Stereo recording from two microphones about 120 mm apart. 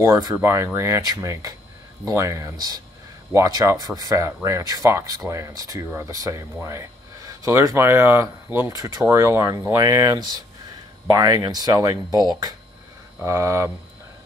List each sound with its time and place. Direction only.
0.0 s speech: 25° right (ahead or behind)
12.1 s speech: 35° left (ahead or behind)
13.2 s speech: 25° right (ahead or behind)